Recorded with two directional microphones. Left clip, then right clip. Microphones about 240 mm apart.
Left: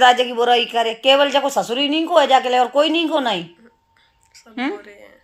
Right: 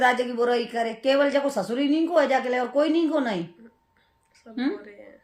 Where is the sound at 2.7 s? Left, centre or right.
Centre.